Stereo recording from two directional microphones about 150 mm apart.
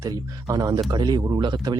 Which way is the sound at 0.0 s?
25° right (ahead or behind).